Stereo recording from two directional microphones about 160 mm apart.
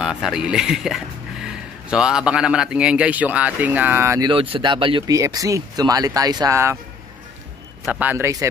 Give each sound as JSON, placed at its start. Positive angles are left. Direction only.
{"t": 0.0, "sound": "speech", "side_deg": -5}
{"t": 4.3, "sound": "speech", "side_deg": -35}
{"t": 5.1, "sound": "speech", "side_deg": -20}
{"t": 7.8, "sound": "a man's voice", "side_deg": -10}